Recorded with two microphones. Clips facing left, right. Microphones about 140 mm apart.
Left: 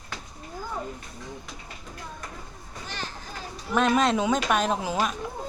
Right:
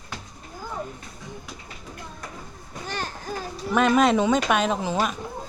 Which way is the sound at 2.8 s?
50° right (ahead or behind).